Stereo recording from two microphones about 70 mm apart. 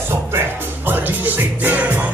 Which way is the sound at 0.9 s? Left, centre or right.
Right.